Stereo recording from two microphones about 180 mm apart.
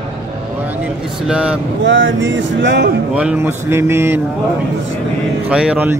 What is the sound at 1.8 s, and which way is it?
Speech, 90° right.